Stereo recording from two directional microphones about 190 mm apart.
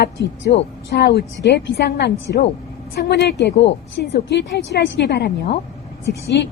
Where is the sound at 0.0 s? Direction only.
65° left (ahead or behind).